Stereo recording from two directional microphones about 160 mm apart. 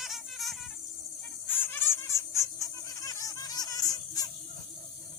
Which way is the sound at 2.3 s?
20° left (ahead or behind).